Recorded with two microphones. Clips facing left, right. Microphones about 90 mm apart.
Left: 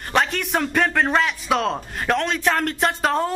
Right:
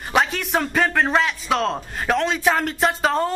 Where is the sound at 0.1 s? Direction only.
Centre (ahead or behind).